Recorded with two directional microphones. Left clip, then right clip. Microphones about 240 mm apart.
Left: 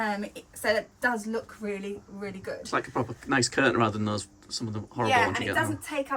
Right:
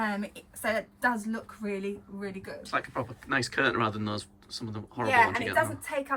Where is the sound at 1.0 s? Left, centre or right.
Centre.